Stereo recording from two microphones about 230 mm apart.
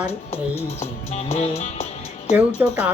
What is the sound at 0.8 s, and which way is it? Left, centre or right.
Music, left.